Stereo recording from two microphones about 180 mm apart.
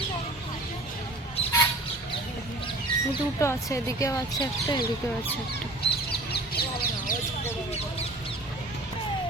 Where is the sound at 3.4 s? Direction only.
15° left (ahead or behind).